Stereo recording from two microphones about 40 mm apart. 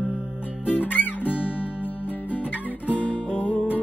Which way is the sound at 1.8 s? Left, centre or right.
Left.